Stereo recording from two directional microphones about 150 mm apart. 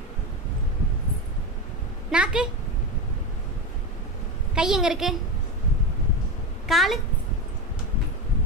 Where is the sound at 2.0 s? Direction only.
5° right (ahead or behind).